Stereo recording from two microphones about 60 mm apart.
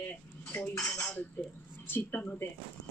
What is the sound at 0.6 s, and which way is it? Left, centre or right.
Cutlery, left.